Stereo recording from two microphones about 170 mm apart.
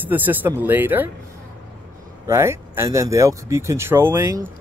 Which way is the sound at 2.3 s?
15° right (ahead or behind).